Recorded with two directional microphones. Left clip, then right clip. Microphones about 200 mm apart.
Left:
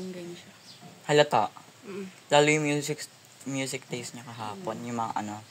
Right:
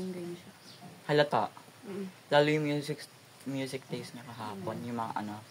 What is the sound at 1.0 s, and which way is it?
Speech, 35° left (ahead or behind).